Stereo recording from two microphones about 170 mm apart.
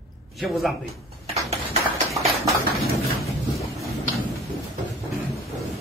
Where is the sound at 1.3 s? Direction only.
40° right (ahead or behind).